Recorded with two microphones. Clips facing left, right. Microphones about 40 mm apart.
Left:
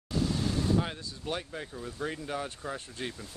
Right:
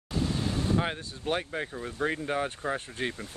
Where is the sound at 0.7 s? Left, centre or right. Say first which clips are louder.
Right 2 dB; right.